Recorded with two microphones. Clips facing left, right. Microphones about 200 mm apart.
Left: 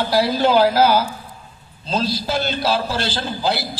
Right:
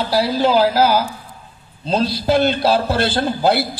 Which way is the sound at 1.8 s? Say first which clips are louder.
Right 4 dB; 60° right (ahead or behind).